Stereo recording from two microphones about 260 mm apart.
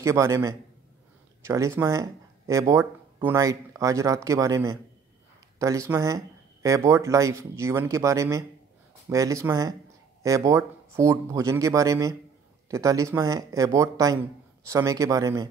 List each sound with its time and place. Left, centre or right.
0.0 s speech: centre